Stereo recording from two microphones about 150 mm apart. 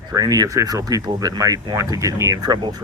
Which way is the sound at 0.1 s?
25° right (ahead or behind).